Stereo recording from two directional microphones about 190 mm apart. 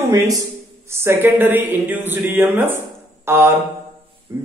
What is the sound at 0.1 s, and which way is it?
Speech, 20° right (ahead or behind).